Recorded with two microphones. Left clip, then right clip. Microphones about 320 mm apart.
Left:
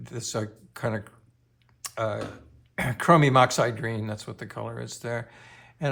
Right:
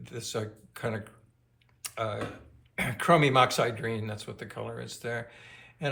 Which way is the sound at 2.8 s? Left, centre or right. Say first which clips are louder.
Left 3 dB; left.